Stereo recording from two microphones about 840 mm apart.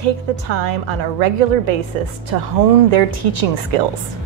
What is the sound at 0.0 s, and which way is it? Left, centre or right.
A woman's voice, right.